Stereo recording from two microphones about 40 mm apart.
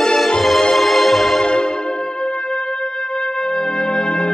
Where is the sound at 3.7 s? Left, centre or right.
Centre.